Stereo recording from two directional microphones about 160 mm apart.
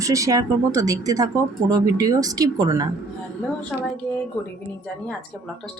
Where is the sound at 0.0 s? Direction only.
20° right (ahead or behind).